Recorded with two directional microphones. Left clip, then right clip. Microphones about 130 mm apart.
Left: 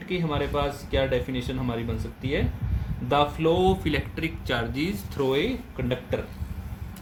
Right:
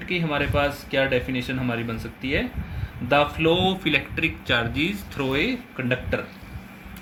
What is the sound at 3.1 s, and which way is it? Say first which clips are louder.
Speech: right 3 dB; 35° left (ahead or behind).